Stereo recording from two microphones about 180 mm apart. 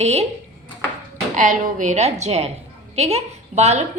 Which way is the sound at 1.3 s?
45° right (ahead or behind).